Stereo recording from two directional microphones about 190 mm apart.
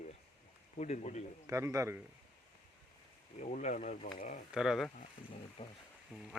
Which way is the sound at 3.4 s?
40° left (ahead or behind).